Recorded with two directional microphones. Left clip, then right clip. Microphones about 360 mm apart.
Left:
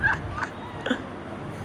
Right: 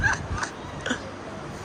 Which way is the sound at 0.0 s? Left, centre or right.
Centre.